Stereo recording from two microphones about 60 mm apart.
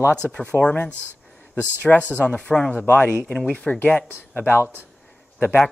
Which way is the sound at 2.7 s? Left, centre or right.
Left.